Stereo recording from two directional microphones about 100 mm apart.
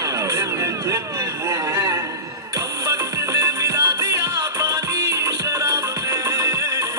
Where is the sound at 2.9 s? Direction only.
35° right (ahead or behind).